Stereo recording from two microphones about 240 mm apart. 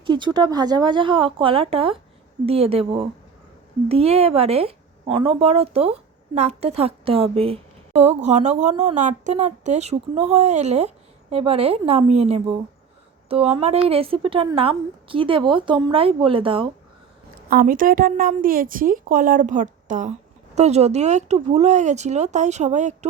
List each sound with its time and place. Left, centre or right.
0.0 s speech: centre
17.5 s a woman's voice: right